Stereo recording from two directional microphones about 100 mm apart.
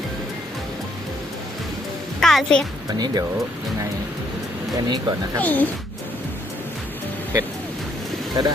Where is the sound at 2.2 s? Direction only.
5° left (ahead or behind).